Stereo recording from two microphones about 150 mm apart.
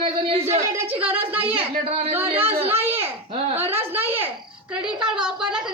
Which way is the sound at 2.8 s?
15° right (ahead or behind).